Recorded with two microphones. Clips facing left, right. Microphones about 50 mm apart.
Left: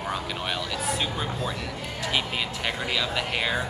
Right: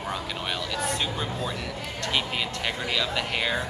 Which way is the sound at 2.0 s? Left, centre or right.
Centre.